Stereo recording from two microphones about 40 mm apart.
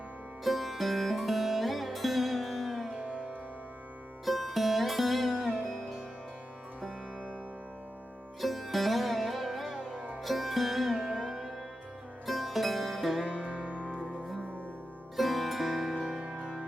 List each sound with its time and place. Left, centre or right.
0.4 s music: centre
4.3 s music: centre
8.4 s music: centre
13.3 s music: left
15.1 s music: centre
16.0 s music: centre